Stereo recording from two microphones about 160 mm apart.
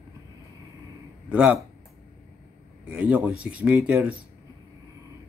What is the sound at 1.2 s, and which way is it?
Speech, 5° right (ahead or behind).